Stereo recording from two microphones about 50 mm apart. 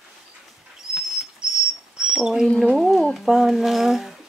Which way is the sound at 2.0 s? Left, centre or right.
Centre.